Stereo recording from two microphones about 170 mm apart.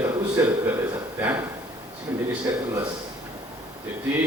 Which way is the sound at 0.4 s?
15° right (ahead or behind).